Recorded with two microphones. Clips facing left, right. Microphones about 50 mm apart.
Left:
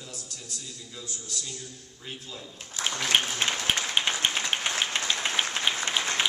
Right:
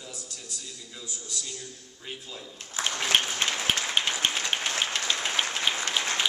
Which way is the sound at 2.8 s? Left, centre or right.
Right.